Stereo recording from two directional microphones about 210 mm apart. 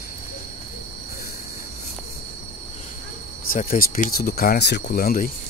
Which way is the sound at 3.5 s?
40° left (ahead or behind).